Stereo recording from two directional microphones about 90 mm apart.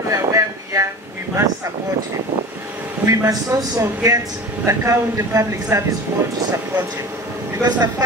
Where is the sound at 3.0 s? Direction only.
40° right (ahead or behind).